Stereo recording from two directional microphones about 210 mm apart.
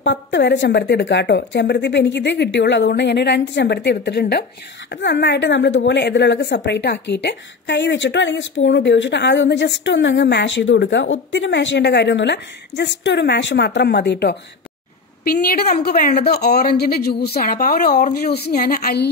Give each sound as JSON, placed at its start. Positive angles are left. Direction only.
{"t": 0.0, "sound": "a woman's voice", "side_deg": 60}